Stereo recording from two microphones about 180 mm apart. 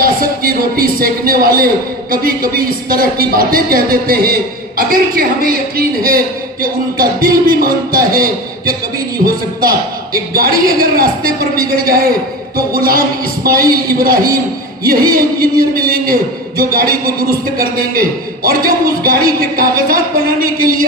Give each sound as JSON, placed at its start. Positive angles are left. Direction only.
{"t": 0.0, "sound": "a man's voice", "side_deg": -55}